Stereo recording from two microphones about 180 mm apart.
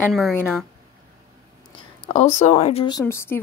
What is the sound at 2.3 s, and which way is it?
Speech, 40° left (ahead or behind).